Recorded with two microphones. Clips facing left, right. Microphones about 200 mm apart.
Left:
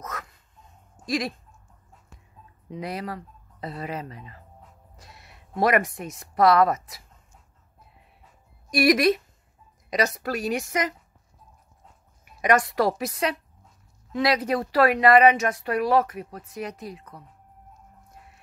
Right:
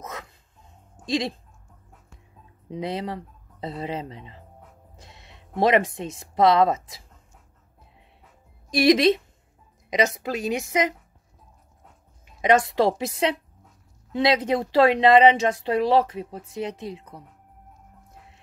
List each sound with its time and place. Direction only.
0.0 s dog: 25° right (ahead or behind)
1.0 s speech: 25° right (ahead or behind)
2.7 s speech: 25° right (ahead or behind)
8.6 s a woman's voice: 25° right (ahead or behind)
12.4 s speech: 25° right (ahead or behind)